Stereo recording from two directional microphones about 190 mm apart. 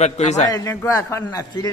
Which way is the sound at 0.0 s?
35° left (ahead or behind).